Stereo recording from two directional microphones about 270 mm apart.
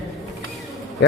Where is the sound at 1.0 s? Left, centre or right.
Left.